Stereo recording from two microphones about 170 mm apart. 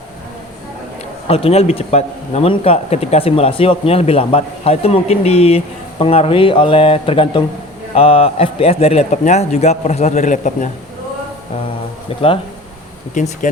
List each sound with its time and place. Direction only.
1.3 s speech: 35° left (ahead or behind)
13.1 s speech: 45° left (ahead or behind)